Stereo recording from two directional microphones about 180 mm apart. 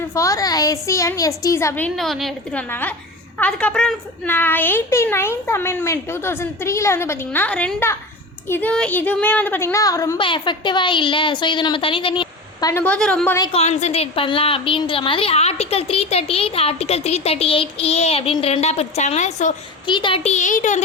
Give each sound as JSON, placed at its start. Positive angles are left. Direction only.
{"t": 0.1, "sound": "a child's voice", "side_deg": 15}
{"t": 2.0, "sound": "a woman's voice", "side_deg": 0}
{"t": 12.8, "sound": "a child's voice", "side_deg": 5}
{"t": 13.5, "sound": "a woman's voice", "side_deg": 35}
{"t": 19.9, "sound": "a woman's voice", "side_deg": 25}